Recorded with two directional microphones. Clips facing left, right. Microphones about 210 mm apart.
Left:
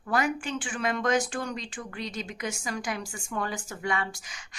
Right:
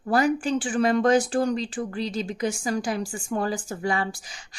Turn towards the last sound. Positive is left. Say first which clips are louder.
# right 5 dB
turn(degrees=-35)  # may be behind; listen again after turning